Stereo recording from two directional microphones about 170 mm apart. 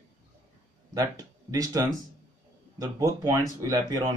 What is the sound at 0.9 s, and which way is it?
Speech, 20° right (ahead or behind).